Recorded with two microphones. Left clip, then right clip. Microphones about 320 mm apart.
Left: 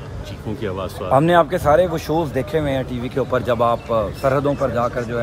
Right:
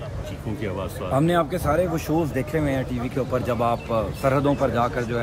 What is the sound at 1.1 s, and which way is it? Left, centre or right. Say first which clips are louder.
Speech: left 7 dB; centre.